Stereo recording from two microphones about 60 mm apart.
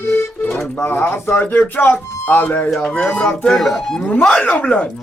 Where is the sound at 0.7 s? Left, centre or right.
Left.